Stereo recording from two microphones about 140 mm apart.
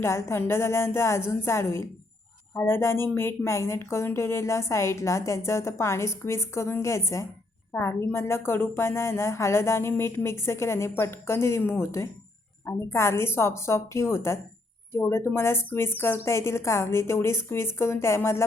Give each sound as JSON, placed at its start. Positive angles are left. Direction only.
{"t": 0.0, "sound": "speech", "side_deg": 20}